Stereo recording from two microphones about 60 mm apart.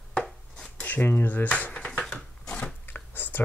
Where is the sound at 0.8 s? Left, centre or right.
Left.